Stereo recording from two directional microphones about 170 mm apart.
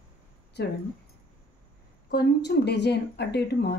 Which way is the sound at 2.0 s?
80° left.